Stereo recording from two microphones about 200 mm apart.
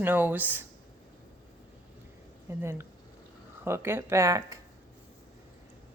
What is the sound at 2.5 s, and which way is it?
Speech, 10° right (ahead or behind).